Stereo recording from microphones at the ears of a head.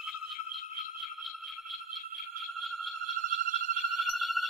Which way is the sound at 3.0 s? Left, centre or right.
Right.